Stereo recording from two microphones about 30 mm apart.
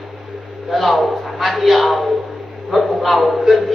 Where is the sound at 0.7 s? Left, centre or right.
Centre.